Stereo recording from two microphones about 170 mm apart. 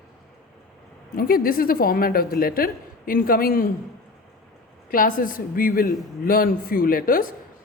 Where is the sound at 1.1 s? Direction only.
60° left (ahead or behind).